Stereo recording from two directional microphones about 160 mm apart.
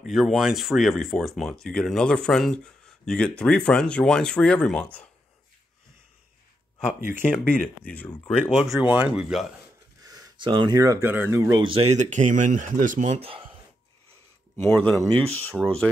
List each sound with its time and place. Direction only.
0.0 s speech: centre (ahead or behind)
7.2 s speech: 5° left (ahead or behind)
10.0 s speech: 25° right (ahead or behind)
11.6 s speech: 35° right (ahead or behind)
14.6 s speech: 10° left (ahead or behind)